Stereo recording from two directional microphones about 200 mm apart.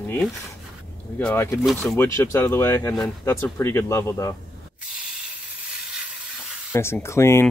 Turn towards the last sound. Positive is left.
turn(degrees=15)  # may be behind; listen again after turning